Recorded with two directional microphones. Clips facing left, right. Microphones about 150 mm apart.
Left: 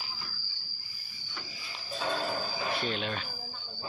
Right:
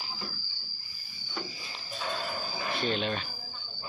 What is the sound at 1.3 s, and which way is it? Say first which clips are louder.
Cricket: right 7 dB; 35° right (ahead or behind).